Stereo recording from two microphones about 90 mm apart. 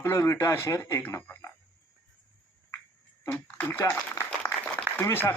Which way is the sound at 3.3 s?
20° left (ahead or behind).